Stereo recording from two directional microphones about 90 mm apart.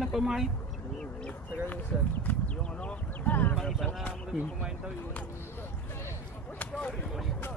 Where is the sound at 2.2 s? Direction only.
15° left (ahead or behind).